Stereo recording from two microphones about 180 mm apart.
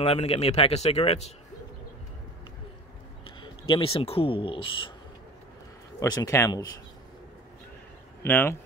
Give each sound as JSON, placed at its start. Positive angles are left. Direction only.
{"t": 0.0, "sound": "speech", "side_deg": 35}
{"t": 3.3, "sound": "speech", "side_deg": 30}
{"t": 5.9, "sound": "speech", "side_deg": 20}
{"t": 8.2, "sound": "speech", "side_deg": 10}